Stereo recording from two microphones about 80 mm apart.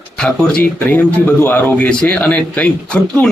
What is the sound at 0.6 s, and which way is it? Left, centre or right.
Speech, left.